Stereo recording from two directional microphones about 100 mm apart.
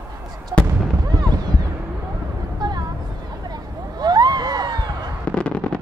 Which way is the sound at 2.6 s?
45° right (ahead or behind).